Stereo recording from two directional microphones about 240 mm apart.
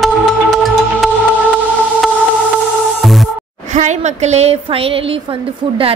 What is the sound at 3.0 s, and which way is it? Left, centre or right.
Music, centre.